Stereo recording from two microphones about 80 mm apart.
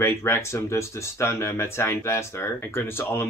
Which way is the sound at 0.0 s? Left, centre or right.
Left.